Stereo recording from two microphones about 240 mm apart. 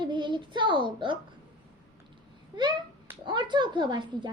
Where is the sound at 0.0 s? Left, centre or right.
Centre.